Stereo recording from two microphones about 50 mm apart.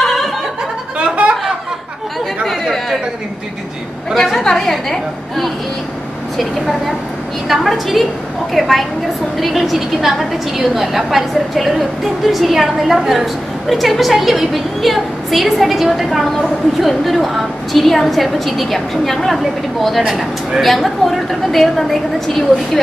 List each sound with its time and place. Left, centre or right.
0.0 s a sound: centre
0.9 s a sound: right
2.4 s chatter: centre
4.1 s a woman's voice: centre
7.4 s a woman's voice: centre
20.0 s a woman's voice: centre